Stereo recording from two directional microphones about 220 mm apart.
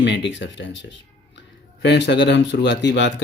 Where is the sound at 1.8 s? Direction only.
50° left (ahead or behind).